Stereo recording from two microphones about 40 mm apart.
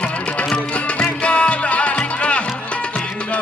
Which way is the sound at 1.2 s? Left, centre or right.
Left.